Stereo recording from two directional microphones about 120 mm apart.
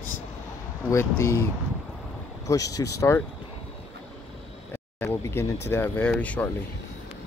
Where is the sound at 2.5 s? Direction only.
30° left (ahead or behind).